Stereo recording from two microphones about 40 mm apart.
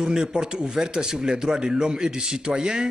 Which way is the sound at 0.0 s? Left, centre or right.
Centre.